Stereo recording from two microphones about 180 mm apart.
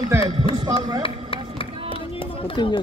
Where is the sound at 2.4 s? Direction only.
25° left (ahead or behind).